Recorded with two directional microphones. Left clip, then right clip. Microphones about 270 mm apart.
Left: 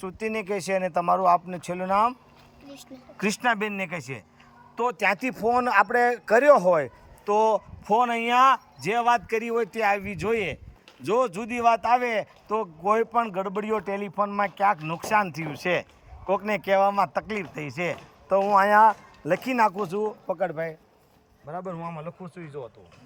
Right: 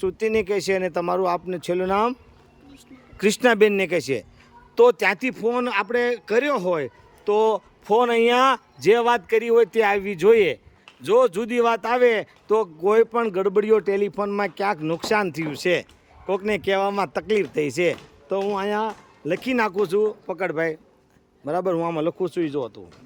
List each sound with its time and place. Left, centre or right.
0.0 s a man's voice: centre
3.2 s a man's voice: centre
20.5 s a man's voice: centre
21.9 s speech: right